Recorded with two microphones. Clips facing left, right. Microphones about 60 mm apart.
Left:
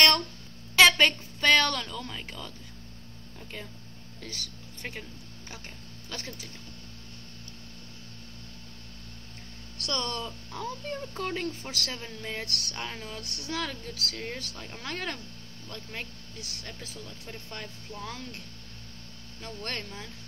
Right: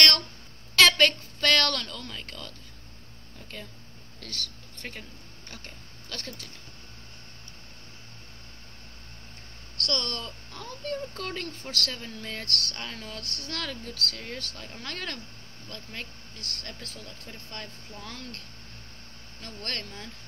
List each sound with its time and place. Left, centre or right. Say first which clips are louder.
0.7 s a woman's voice: left 1 dB; centre
4.2 s speech: right 2 dB; centre
6.0 s speech: even; centre
9.8 s speech: even; centre
19.4 s speech: left 1 dB; centre